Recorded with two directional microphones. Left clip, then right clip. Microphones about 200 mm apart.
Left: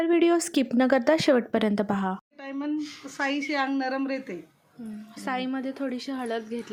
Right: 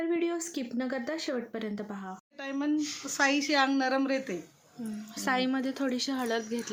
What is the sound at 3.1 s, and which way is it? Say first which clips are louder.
A woman's voice: right 1 dB; 5° right (ahead or behind).